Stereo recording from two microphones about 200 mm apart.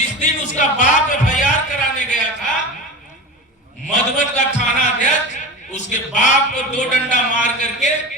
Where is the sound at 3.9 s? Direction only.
35° left (ahead or behind).